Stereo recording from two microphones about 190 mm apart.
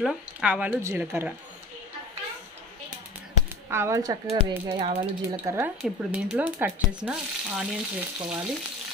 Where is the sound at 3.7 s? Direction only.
15° right (ahead or behind).